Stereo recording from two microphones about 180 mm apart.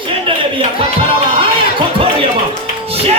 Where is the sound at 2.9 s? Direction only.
35° right (ahead or behind).